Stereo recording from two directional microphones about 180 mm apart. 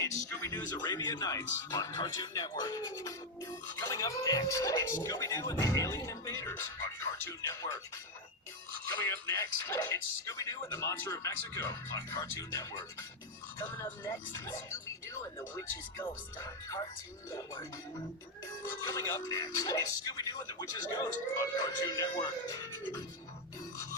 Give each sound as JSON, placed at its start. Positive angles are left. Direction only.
{"t": 0.0, "sound": "speech", "side_deg": 15}
{"t": 9.0, "sound": "speech", "side_deg": 15}